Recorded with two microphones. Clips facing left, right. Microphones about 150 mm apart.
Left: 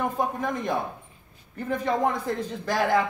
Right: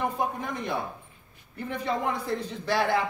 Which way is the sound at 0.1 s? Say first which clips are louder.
Left 3 dB; 45° left (ahead or behind).